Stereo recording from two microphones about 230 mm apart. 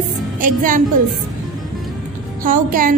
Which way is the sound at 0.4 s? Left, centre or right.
Right.